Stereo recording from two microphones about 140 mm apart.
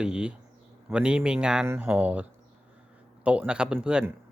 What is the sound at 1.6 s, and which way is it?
Speech, 20° right (ahead or behind).